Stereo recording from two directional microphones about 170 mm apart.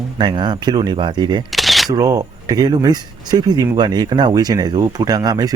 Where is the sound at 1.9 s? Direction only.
20° right (ahead or behind).